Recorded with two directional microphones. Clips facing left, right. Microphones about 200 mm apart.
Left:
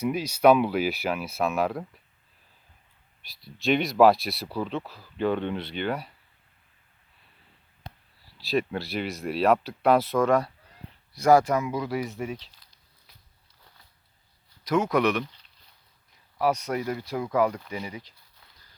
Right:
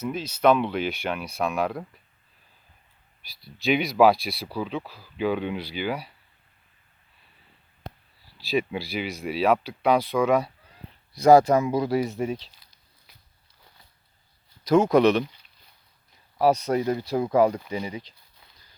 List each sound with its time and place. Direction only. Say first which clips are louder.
0.0 s speech: left 2 dB; 10° left (ahead or behind)
3.2 s speech: even; centre (ahead or behind)
8.4 s speech: right 1 dB; centre (ahead or behind)
11.1 s speech: right 4 dB; 20° right (ahead or behind)
11.4 s speech: right 5 dB; 35° right (ahead or behind)
14.6 s speech: right 5 dB; 30° right (ahead or behind)
16.4 s speech: right 5 dB; 35° right (ahead or behind)